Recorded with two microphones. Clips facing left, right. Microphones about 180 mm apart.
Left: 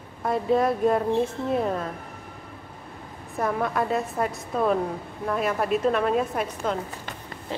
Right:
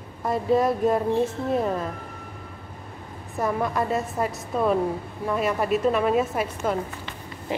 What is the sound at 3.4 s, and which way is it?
A woman's voice, centre (ahead or behind).